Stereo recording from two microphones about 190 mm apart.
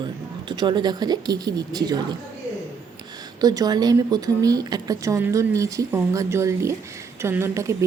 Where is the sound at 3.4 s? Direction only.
20° right (ahead or behind).